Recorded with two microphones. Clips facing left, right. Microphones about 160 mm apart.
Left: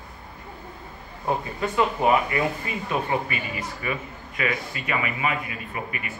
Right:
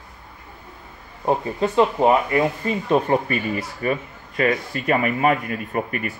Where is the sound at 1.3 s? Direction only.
25° right (ahead or behind).